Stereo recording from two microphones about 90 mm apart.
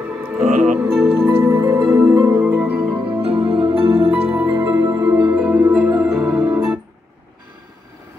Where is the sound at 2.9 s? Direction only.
75° right (ahead or behind); by 4.3 s 90° right.